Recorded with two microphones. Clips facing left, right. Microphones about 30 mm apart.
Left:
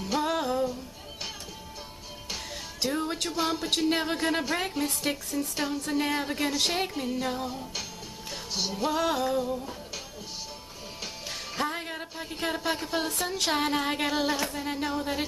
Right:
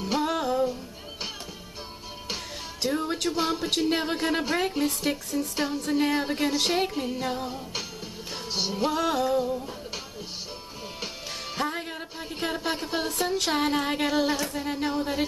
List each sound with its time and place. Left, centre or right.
0.2 s music: centre
2.8 s music: centre
8.5 s music: right
8.9 s music: centre
11.5 s a sound: centre
12.4 s speech: centre
13.4 s music: centre
14.8 s speech: centre